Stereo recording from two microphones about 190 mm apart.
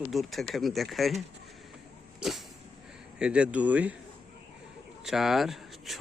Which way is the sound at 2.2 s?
Centre (ahead or behind).